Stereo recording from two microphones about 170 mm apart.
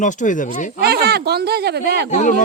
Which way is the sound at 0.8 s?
65° right (ahead or behind).